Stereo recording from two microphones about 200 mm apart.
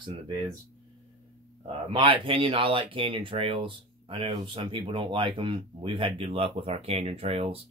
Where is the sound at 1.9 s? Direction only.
25° right (ahead or behind).